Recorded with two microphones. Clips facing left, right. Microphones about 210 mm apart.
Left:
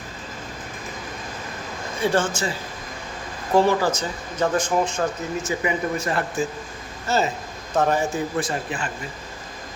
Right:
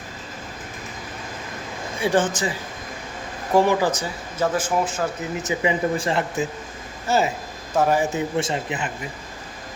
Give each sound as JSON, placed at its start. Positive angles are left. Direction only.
{"t": 2.0, "sound": "speech", "side_deg": -15}
{"t": 5.5, "sound": "speech", "side_deg": -25}
{"t": 8.4, "sound": "speech", "side_deg": -25}